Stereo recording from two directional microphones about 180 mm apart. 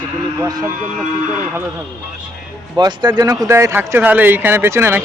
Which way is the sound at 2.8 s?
25° right (ahead or behind).